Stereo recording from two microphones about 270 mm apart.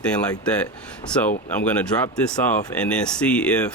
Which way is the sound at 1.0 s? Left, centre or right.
Centre.